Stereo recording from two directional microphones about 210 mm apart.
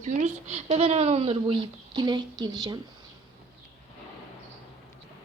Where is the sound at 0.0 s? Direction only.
35° right (ahead or behind).